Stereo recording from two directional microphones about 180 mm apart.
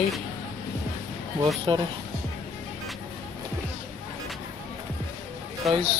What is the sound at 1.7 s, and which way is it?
Speech, 25° right (ahead or behind).